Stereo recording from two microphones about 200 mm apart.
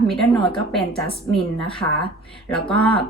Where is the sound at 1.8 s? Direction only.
15° left (ahead or behind).